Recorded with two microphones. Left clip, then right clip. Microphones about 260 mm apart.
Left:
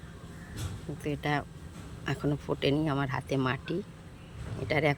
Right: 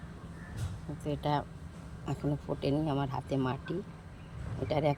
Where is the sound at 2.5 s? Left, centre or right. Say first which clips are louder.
Left 3 dB; centre.